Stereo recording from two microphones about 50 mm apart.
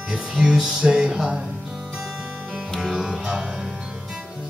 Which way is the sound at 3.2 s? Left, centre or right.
Centre.